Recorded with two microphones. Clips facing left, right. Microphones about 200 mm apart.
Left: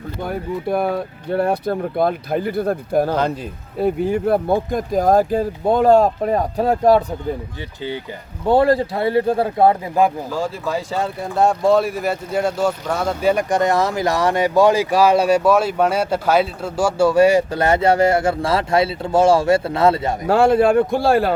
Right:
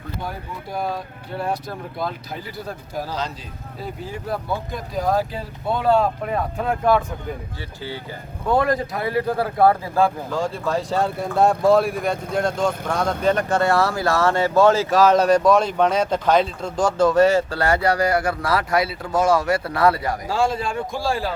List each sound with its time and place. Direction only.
0.2 s speech: 60° left (ahead or behind); by 7.0 s 35° left (ahead or behind)
7.8 s speech: 20° left (ahead or behind)
8.4 s speech: 30° left (ahead or behind)
10.2 s speech: 5° left (ahead or behind); by 20.1 s 25° left (ahead or behind)
20.2 s speech: 60° left (ahead or behind)